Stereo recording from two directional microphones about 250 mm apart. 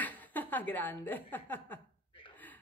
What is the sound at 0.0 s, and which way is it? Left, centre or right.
A woman's voice, centre.